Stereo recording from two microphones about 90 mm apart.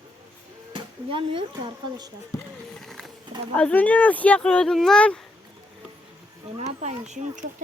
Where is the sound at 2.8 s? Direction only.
Centre (ahead or behind).